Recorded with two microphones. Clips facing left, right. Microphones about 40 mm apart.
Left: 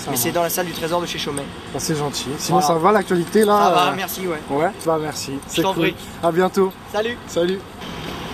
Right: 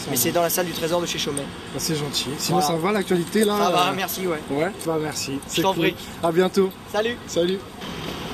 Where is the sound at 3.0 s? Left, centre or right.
Right.